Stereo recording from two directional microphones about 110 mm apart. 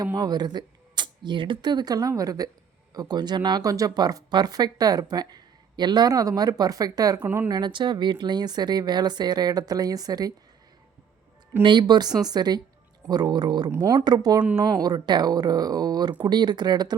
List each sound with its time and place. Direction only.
0.0 s speech: 35° right (ahead or behind)
11.6 s speech: 45° right (ahead or behind)